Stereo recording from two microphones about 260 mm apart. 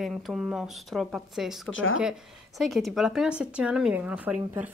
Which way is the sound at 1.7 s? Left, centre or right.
Left.